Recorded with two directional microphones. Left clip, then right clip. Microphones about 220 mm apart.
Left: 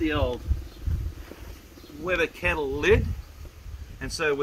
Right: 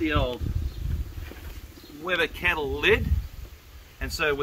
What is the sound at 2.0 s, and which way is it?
Speech, 5° right (ahead or behind).